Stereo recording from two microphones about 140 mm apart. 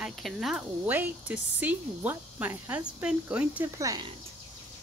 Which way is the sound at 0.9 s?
15° right (ahead or behind).